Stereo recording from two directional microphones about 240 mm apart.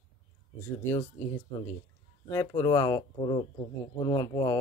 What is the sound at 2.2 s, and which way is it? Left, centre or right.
Speech, centre.